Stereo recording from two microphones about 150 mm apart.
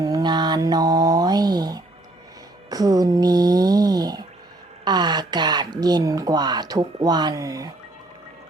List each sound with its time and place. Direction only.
0.0 s mantra: 25° right (ahead or behind)
2.6 s a sound: 25° right (ahead or behind)
4.9 s speech: 30° right (ahead or behind)